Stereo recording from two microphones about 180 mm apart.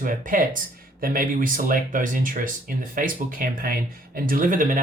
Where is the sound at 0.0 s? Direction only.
50° right (ahead or behind).